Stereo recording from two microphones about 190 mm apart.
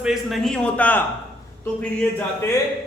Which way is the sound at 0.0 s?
Centre (ahead or behind).